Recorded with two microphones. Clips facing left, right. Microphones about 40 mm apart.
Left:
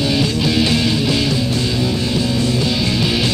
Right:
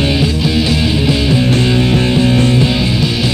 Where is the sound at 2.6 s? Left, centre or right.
Right.